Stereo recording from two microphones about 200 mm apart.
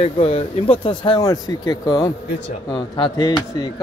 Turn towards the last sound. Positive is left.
turn(degrees=20)  # may be behind; listen again after turning